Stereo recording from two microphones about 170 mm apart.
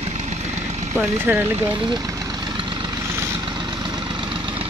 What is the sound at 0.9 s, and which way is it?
Speech, 10° right (ahead or behind).